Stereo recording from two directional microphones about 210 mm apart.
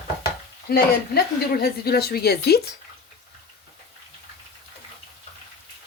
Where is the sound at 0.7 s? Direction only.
50° left (ahead or behind).